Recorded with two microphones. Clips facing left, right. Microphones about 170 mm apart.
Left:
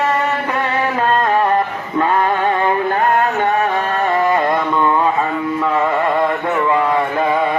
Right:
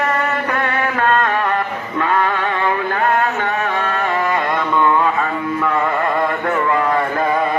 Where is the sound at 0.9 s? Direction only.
25° left (ahead or behind).